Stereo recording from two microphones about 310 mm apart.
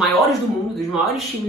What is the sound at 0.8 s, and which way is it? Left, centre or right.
Speech, centre.